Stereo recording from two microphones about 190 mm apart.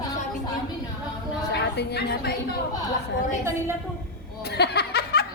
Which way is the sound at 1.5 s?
60° left (ahead or behind).